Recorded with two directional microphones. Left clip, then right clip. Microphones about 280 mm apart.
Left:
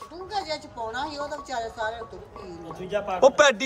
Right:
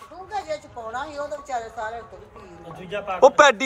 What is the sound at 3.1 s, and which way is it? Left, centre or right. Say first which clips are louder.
Speech: right 4 dB; centre.